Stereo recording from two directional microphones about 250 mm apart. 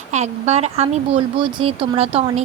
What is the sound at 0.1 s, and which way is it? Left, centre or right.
Speech, right.